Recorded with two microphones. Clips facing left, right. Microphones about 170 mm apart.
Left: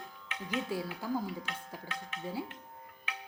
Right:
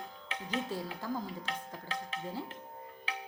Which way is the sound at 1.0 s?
10° left (ahead or behind).